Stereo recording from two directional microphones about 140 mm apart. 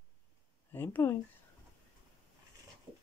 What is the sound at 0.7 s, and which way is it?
Speech, 15° left (ahead or behind).